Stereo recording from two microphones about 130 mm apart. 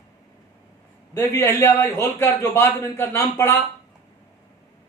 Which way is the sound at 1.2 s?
20° left (ahead or behind).